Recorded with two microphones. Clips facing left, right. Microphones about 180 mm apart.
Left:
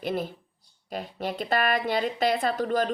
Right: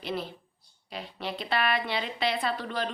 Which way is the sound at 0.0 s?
50° left (ahead or behind).